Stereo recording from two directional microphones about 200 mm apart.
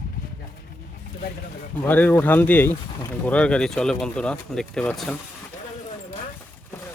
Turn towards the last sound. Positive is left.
turn(degrees=5)  # may be behind; listen again after turning